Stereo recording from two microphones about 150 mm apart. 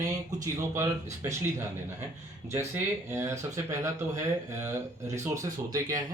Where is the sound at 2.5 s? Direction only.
15° right (ahead or behind).